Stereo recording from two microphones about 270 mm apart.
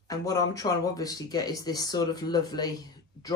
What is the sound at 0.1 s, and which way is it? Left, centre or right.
Speech, centre.